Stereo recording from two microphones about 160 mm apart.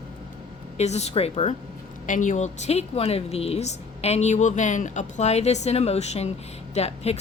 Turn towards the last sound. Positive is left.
turn(degrees=40)  # may be behind; listen again after turning